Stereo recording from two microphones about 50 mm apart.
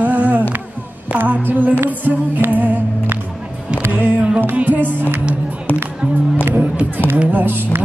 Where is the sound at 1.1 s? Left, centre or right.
Right.